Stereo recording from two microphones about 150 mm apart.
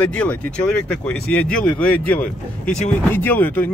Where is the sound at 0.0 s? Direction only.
5° left (ahead or behind).